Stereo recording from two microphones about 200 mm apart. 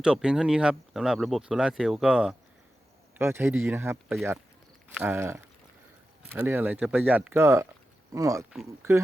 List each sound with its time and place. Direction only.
0.0 s speech: 5° right (ahead or behind)